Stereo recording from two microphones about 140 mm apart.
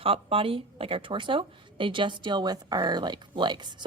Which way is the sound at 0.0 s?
40° right (ahead or behind).